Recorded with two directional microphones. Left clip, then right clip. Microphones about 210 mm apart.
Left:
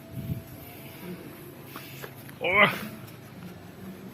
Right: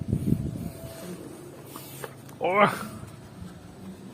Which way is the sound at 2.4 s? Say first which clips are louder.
Even; 15° right (ahead or behind).